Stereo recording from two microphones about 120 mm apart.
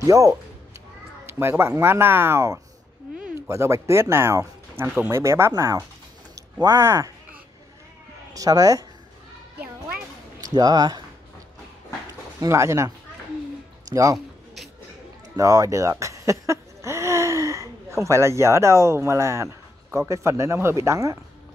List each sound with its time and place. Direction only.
0.0 s speech: 25° right (ahead or behind)
8.3 s speech: 30° right (ahead or behind)
10.4 s speech: 30° right (ahead or behind)
12.4 s speech: 25° right (ahead or behind)
14.1 s a sound: centre (ahead or behind)
15.3 s speech: 30° right (ahead or behind)